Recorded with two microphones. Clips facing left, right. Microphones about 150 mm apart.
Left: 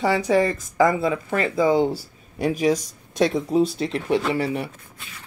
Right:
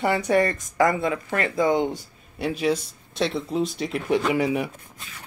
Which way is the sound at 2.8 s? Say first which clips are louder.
Left 5 dB; 45° left (ahead or behind).